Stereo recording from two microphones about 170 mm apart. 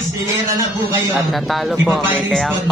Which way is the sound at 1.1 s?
Centre (ahead or behind).